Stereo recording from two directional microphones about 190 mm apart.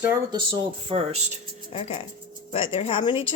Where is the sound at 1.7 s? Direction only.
30° left (ahead or behind).